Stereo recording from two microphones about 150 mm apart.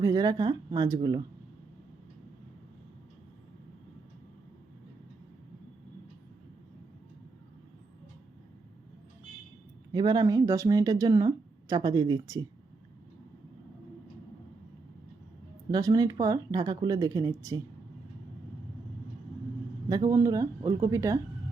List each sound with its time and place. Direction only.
0.0 s speech: 25° right (ahead or behind)
9.9 s speech: 30° right (ahead or behind)
15.7 s speech: 25° right (ahead or behind)
19.9 s speech: 25° right (ahead or behind)